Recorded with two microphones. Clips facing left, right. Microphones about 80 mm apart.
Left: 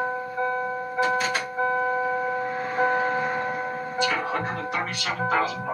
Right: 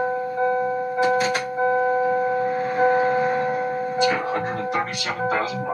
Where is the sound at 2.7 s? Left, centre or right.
Centre.